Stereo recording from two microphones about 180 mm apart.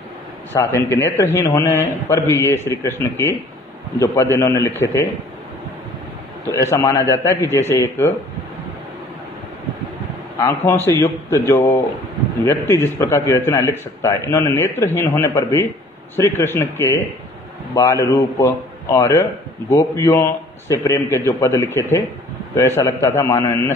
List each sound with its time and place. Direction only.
0.5 s a man's voice: 15° left (ahead or behind)
6.5 s a man's voice: 15° left (ahead or behind)
10.4 s a man's voice: 15° left (ahead or behind)